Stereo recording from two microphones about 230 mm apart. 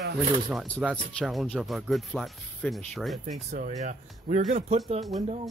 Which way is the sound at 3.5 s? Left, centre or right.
Right.